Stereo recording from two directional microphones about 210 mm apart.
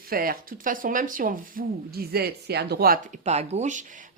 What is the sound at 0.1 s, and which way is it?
Speech, 45° right (ahead or behind).